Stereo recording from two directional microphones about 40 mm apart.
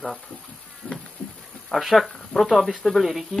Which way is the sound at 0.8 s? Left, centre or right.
Centre.